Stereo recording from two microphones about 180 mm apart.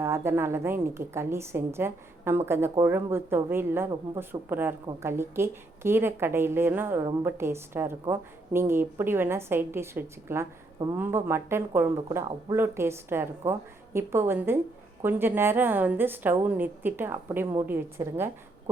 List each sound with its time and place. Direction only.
0.0 s a woman's voice: 15° right (ahead or behind)